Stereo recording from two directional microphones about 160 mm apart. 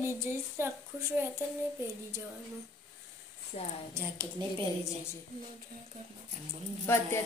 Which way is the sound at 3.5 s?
45° left (ahead or behind).